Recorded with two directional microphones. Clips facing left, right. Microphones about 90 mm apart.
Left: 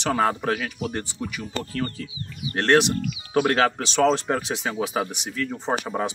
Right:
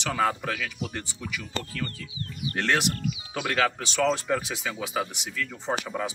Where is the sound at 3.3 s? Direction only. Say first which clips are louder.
Left 7 dB; 40° left (ahead or behind).